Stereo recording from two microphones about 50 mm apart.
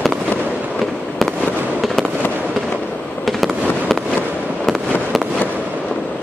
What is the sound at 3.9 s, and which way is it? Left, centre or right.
Fireworks, centre.